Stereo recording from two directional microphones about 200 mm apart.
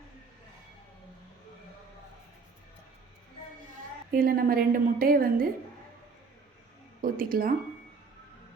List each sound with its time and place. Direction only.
4.1 s a woman's voice: 45° right (ahead or behind)
7.0 s a woman's voice: 45° right (ahead or behind)